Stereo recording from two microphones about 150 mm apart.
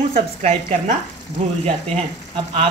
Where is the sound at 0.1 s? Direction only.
45° right (ahead or behind).